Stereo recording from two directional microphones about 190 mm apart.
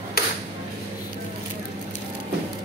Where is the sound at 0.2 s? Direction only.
55° left (ahead or behind).